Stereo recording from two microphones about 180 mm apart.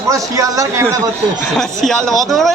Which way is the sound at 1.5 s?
Centre (ahead or behind).